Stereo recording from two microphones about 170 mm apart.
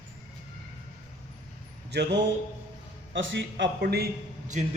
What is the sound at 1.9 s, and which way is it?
Mantra, 85° right.